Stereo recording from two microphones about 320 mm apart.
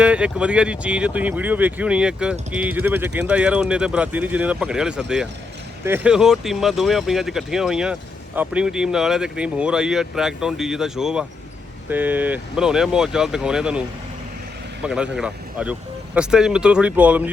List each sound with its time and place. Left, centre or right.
0.0 s speech: centre
14.8 s speech: centre